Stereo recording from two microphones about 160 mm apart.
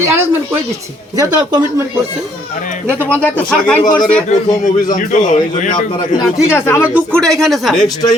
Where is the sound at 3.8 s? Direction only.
25° left (ahead or behind).